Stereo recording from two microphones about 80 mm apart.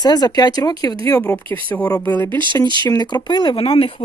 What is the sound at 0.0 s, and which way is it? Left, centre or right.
Speech, left.